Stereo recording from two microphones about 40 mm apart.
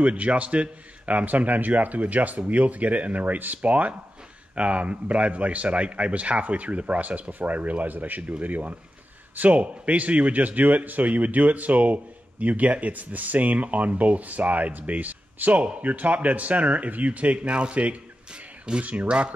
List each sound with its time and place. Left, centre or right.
0.0 s a man's voice: right